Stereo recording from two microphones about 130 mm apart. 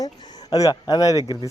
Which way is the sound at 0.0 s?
35° left (ahead or behind).